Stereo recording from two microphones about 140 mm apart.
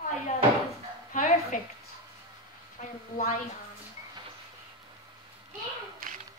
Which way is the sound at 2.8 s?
75° left (ahead or behind).